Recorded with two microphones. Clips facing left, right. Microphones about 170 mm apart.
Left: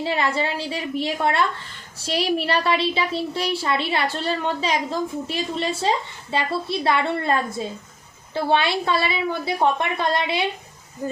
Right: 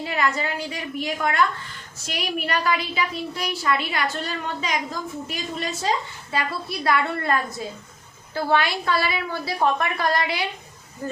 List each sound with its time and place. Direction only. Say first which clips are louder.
0.0 s a woman's voice: left 2 dB; 30° left (ahead or behind)
11.0 s speech: left 3 dB; 15° left (ahead or behind)